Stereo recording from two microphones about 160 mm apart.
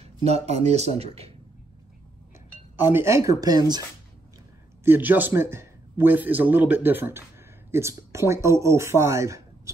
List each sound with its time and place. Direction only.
0.0 s speech: 40° right (ahead or behind)
2.7 s speech: 15° right (ahead or behind)
4.8 s a man's voice: 10° right (ahead or behind)